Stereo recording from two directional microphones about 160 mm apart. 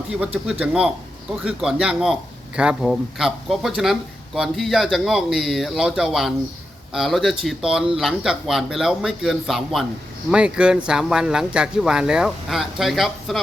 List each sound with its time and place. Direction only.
0.6 s speech: 5° right (ahead or behind)